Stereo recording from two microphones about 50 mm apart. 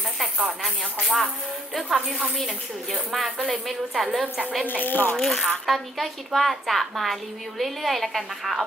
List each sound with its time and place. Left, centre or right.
1.0 s speech: centre
3.4 s speech: centre
4.8 s speech: left
5.1 s speech: centre